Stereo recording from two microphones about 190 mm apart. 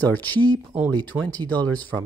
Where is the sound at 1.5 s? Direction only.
10° left (ahead or behind).